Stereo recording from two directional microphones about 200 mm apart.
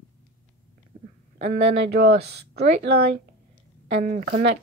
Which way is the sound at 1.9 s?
50° right (ahead or behind).